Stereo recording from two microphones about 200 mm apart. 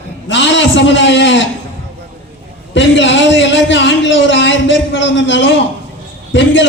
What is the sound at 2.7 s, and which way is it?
A man's voice, 65° left (ahead or behind).